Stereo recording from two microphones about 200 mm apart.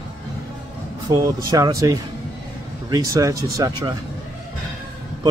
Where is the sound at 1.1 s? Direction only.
15° right (ahead or behind).